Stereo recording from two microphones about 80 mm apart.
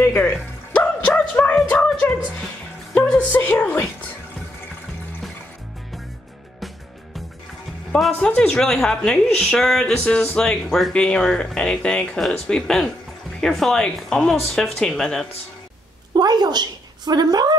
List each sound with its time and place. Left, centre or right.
0.0 s music: left
1.0 s music: centre
1.5 s a sound: centre
2.0 s a woman's voice: centre
7.9 s speech: centre
16.2 s a woman's voice: right